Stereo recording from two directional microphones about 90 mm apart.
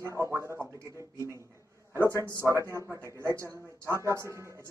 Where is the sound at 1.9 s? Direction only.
30° right (ahead or behind).